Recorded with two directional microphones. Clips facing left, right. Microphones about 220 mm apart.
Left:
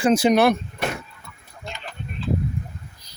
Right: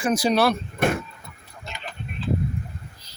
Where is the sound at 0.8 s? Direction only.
50° right (ahead or behind).